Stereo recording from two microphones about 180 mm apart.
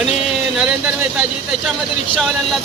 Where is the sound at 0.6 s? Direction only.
5° right (ahead or behind).